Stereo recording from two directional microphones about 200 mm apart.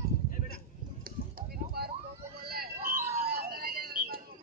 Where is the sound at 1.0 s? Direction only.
45° right (ahead or behind).